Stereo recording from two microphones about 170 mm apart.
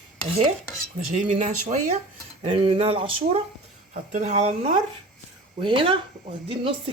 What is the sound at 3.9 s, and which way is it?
Speech, 45° right (ahead or behind).